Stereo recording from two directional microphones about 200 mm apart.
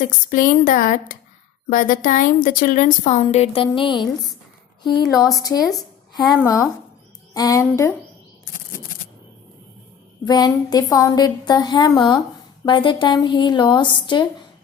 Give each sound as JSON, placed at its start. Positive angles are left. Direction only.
{"t": 0.0, "sound": "a woman's voice", "side_deg": 40}
{"t": 5.0, "sound": "a woman's voice", "side_deg": 0}
{"t": 5.3, "sound": "speech", "side_deg": 20}
{"t": 5.5, "sound": "a sound", "side_deg": 0}
{"t": 6.4, "sound": "speech", "side_deg": 15}
{"t": 10.2, "sound": "speech", "side_deg": 20}